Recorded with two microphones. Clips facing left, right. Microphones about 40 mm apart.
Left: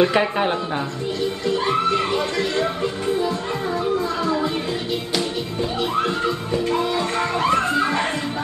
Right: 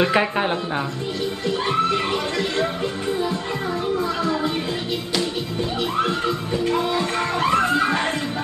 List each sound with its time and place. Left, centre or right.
0.0 s speech: centre
7.0 s music: right